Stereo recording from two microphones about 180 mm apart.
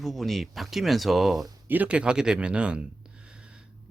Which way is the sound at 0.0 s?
Centre (ahead or behind).